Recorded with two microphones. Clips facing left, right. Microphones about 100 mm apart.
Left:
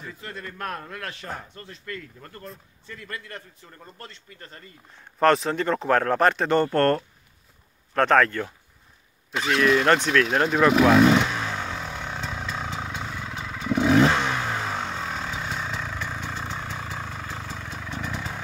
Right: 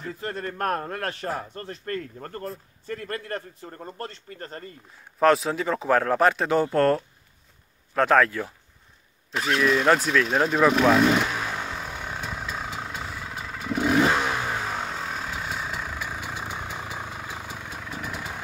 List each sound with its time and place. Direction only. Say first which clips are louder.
0.2 s a man's voice: right 6 dB; 45° right (ahead or behind)
4.9 s speech: even; centre (ahead or behind)
9.3 s vehicle: left 2 dB; centre (ahead or behind)